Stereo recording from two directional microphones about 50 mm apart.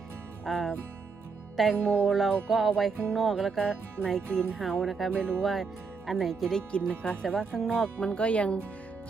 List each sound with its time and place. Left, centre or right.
0.4 s speech: centre
1.7 s speech: centre
2.0 s speech: centre
3.6 s speech: centre
6.6 s speech: centre
7.3 s speech: centre
7.9 s speech: left